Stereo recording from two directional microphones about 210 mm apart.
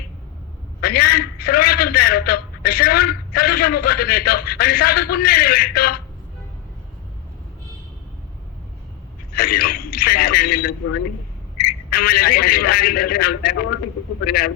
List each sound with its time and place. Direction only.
0.8 s a man's voice: 45° left (ahead or behind)
9.3 s a man's voice: 45° left (ahead or behind)